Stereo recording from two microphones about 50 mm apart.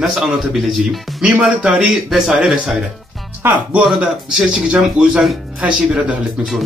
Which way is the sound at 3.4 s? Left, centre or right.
Right.